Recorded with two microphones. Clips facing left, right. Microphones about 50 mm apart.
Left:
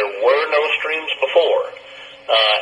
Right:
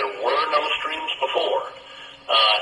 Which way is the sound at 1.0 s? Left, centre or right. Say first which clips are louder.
Left 8 dB; left.